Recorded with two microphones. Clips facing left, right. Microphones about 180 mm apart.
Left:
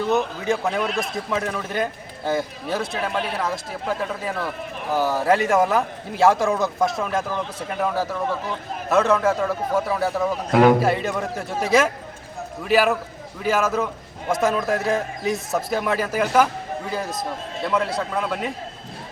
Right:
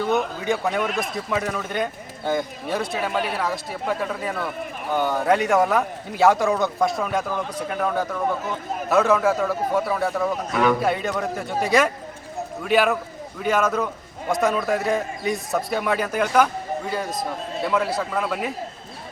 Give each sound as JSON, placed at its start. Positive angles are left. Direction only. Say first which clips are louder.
{"t": 0.1, "sound": "a man's voice", "louder": "left 1 dB", "side_deg": 0}
{"t": 10.5, "sound": "a man's voice", "louder": "left 6 dB", "side_deg": 70}
{"t": 10.8, "sound": "a man's voice", "louder": "left 1 dB", "side_deg": 0}